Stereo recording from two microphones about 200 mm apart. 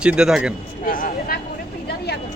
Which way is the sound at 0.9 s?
45° left (ahead or behind).